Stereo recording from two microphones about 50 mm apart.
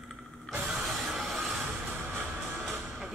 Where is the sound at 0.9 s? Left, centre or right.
Centre.